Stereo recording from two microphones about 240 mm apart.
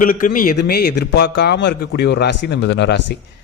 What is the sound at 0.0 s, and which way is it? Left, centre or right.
A man's voice, left.